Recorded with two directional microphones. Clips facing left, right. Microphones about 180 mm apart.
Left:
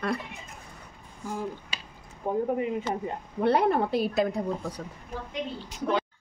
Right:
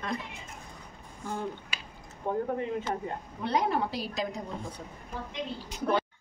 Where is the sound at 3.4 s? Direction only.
55° left (ahead or behind).